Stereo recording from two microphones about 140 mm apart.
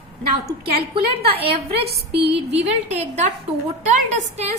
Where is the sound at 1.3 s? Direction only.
45° right (ahead or behind).